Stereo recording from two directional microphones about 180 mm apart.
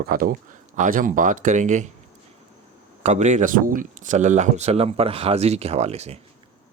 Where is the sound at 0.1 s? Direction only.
50° right (ahead or behind).